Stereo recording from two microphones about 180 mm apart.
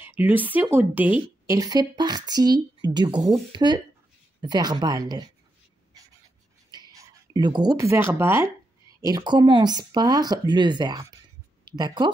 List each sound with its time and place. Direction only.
0.0 s speech: 10° right (ahead or behind)
1.6 s speech: 20° right (ahead or behind)
6.7 s speech: 25° right (ahead or behind)